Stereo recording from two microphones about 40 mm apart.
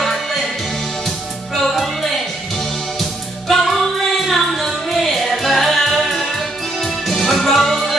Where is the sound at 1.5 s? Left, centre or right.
Centre.